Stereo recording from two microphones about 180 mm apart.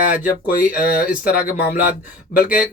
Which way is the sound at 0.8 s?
55° left (ahead or behind).